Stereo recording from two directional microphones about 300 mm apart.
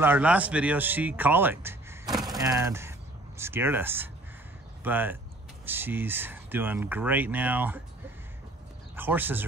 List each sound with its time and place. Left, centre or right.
0.0 s speech: centre
8.9 s speech: centre